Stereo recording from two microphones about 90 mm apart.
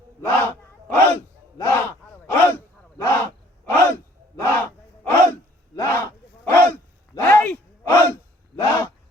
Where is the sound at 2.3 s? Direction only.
30° left (ahead or behind).